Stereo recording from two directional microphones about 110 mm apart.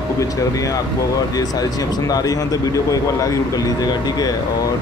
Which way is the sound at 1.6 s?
35° left (ahead or behind).